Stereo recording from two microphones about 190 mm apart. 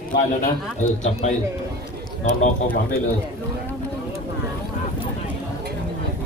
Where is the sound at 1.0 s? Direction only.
35° left (ahead or behind).